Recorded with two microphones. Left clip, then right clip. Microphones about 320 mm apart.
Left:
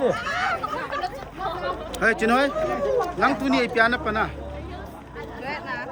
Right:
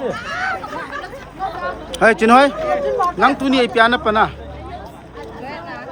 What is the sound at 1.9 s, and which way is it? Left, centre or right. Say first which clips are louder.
Speech: right 10 dB; centre.